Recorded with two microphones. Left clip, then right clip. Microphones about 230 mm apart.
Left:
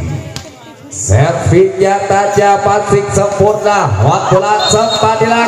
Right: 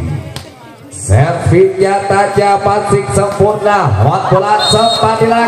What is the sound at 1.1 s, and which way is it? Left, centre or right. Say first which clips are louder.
A man's voice: left 1 dB; left.